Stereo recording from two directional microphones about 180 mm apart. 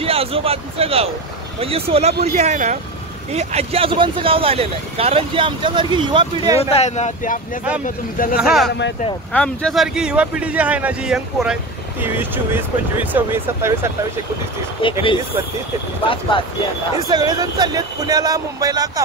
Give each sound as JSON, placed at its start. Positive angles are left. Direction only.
{"t": 0.0, "sound": "speech", "side_deg": -30}
{"t": 6.6, "sound": "speech", "side_deg": 35}
{"t": 7.8, "sound": "speech", "side_deg": 50}
{"t": 8.4, "sound": "speech", "side_deg": 0}
{"t": 14.8, "sound": "speech", "side_deg": 30}
{"t": 17.1, "sound": "speech", "side_deg": -20}